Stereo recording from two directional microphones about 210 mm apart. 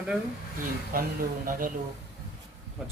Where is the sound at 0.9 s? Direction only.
40° right (ahead or behind).